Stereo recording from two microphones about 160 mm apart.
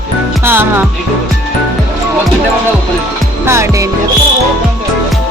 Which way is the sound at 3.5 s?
15° right (ahead or behind).